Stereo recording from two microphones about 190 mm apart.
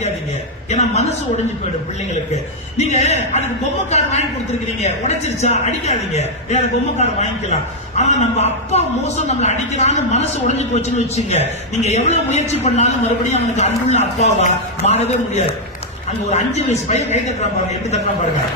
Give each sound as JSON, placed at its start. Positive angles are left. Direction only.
{"t": 0.7, "sound": "a woman's voice", "side_deg": 35}